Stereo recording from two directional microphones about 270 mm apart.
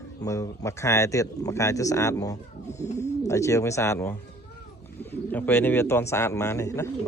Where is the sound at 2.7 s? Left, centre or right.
Left.